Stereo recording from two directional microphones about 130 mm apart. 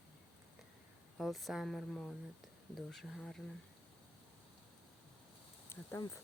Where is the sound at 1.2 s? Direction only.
Centre (ahead or behind).